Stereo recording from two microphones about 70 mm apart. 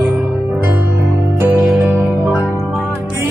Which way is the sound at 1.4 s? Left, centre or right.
Right.